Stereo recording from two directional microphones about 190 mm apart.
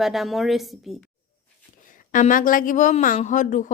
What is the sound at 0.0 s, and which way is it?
Speech, centre (ahead or behind).